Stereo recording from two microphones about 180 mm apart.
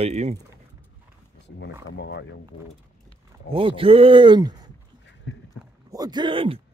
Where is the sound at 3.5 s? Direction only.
30° right (ahead or behind).